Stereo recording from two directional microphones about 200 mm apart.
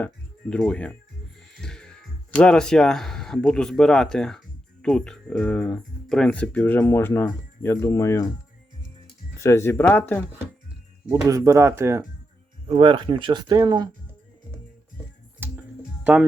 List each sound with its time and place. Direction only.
0.0 s speech: 5° left (ahead or behind)
1.6 s music: 5° left (ahead or behind)
2.3 s speech: 5° left (ahead or behind)
9.4 s speech: 15° left (ahead or behind)
11.3 s speech: 15° right (ahead or behind)
12.6 s speech: 25° right (ahead or behind)
15.4 s music: 10° right (ahead or behind)